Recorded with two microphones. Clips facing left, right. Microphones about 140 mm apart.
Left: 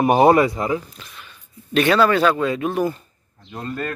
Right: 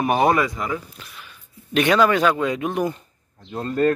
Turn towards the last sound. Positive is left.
turn(degrees=-35)  # may be behind; listen again after turning